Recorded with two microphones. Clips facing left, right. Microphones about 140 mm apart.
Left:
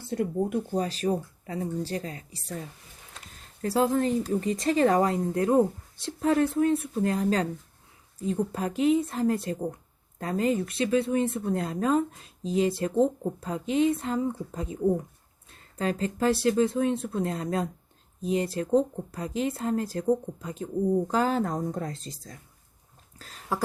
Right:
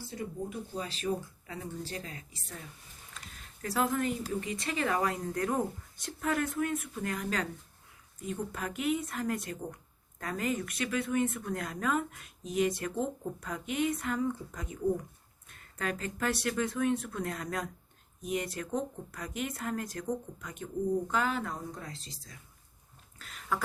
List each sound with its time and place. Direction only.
0.0 s speech: 60° left (ahead or behind)
0.7 s a woman's voice: 40° left (ahead or behind)
23.1 s a sound: 35° left (ahead or behind)